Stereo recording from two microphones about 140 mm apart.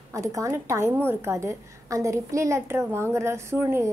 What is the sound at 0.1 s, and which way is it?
A woman's voice, 25° right (ahead or behind).